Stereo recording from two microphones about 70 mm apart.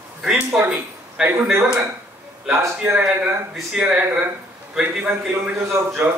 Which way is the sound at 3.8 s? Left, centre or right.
Centre.